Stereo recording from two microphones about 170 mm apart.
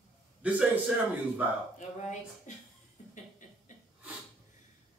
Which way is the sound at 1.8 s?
45° left (ahead or behind).